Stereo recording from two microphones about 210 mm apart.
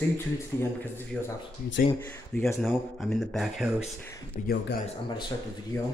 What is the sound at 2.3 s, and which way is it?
Speech, 5° left (ahead or behind).